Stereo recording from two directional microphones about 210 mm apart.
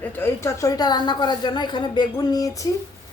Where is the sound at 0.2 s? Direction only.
15° left (ahead or behind).